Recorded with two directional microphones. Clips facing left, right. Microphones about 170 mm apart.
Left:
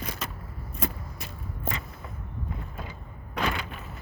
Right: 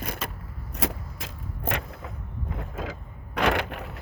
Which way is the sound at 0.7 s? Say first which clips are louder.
Right 3 dB; 85° right.